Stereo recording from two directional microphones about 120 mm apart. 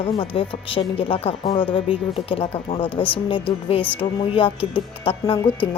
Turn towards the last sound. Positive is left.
turn(degrees=45)  # may be behind; listen again after turning